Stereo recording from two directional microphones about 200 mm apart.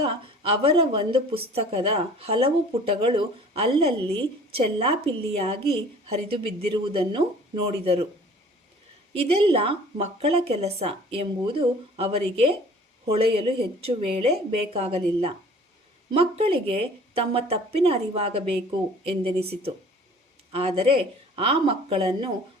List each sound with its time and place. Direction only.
0.0 s a woman's voice: 30° right (ahead or behind)
9.1 s a woman's voice: 30° right (ahead or behind)